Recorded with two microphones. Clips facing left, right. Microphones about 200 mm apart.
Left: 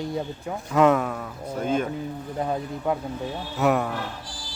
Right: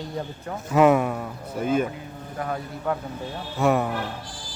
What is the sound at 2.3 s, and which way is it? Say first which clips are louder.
Speech: left 2 dB; 20° left (ahead or behind).